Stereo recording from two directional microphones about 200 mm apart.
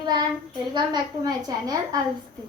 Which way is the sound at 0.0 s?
20° right (ahead or behind).